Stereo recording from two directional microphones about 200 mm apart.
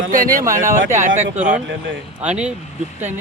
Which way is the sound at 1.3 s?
10° right (ahead or behind).